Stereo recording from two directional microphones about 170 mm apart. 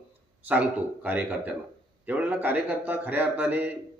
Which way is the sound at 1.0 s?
10° right (ahead or behind).